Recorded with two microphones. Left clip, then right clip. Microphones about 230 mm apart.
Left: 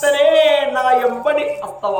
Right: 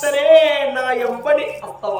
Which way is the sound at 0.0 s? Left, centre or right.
Centre.